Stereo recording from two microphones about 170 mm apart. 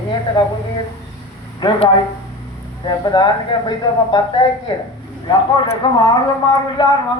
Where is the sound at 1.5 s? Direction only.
25° left (ahead or behind).